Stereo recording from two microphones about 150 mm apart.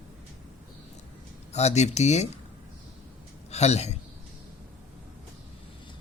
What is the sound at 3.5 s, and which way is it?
Speech, 45° left (ahead or behind).